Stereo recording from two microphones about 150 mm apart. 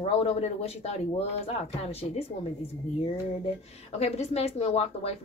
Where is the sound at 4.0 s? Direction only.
45° left (ahead or behind).